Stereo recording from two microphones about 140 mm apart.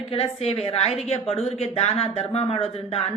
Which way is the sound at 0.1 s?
45° left (ahead or behind).